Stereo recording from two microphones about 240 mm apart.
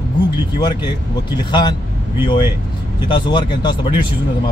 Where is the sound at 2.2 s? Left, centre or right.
Centre.